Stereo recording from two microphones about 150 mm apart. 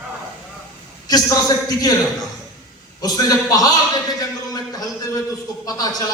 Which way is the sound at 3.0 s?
25° left (ahead or behind).